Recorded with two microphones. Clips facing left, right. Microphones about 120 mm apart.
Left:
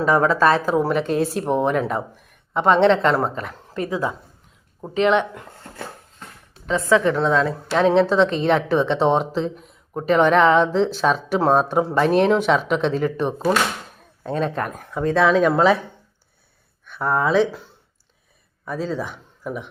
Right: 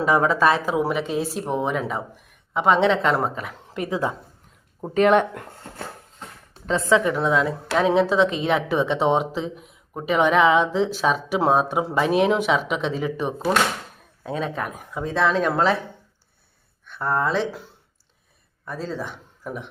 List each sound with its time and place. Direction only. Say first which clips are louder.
0.0 s a woman's voice: left 2 dB; 15° right (ahead or behind)
3.8 s a woman's voice: left 1 dB; 25° right (ahead or behind)
4.9 s speech: right 1 dB; 45° right (ahead or behind)
6.7 s a woman's voice: left 1 dB; 25° right (ahead or behind)
7.0 s a woman's voice: left 2 dB; 10° right (ahead or behind)
16.8 s speech: left 2 dB; 5° left (ahead or behind)
18.6 s speech: left 4 dB; centre (ahead or behind)